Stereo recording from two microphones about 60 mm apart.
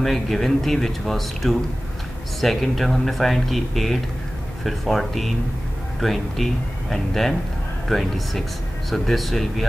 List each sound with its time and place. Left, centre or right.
0.0 s speech: centre